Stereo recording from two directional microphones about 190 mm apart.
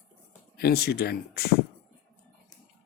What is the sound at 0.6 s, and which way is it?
Speech, 55° left (ahead or behind).